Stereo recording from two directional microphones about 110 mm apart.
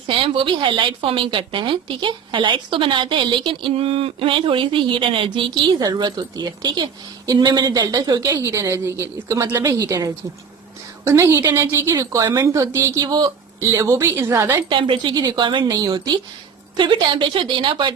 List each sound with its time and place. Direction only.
0.1 s a woman's voice: 50° right (ahead or behind)
3.7 s a woman's voice: 60° right (ahead or behind)
5.8 s a woman's voice: 40° right (ahead or behind)
13.0 s a woman's voice: 40° right (ahead or behind)
13.6 s a woman's voice: 25° right (ahead or behind)
14.7 s a woman's voice: 50° right (ahead or behind)